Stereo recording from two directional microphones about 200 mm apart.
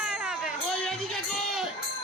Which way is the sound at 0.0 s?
5° right (ahead or behind).